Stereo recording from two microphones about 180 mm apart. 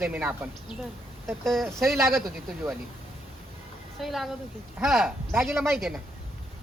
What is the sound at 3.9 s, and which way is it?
Speech, centre (ahead or behind).